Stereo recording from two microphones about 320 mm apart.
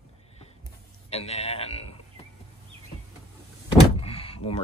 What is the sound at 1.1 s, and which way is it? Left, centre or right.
Speech, centre.